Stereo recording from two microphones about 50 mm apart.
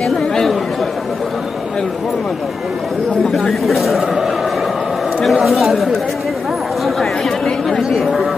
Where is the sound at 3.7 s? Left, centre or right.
Centre.